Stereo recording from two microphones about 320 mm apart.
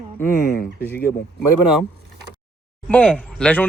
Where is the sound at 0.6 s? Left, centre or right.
Left.